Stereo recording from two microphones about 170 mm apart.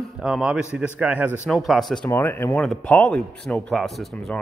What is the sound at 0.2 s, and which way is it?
A man's voice, 5° right (ahead or behind).